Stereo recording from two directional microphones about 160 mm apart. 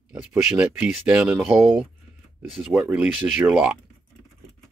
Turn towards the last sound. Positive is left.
turn(degrees=-5)  # may be behind; listen again after turning